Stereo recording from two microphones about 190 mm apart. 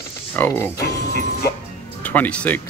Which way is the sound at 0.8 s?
60° left (ahead or behind).